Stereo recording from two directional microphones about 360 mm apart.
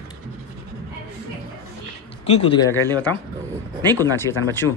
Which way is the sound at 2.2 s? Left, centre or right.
Centre.